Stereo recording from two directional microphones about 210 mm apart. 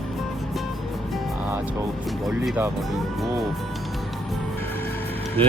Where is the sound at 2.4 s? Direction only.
10° right (ahead or behind).